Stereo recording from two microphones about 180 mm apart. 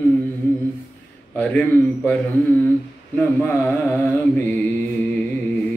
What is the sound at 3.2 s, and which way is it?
Mantra, 5° left (ahead or behind).